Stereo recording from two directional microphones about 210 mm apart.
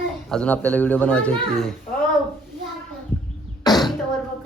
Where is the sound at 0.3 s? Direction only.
5° left (ahead or behind).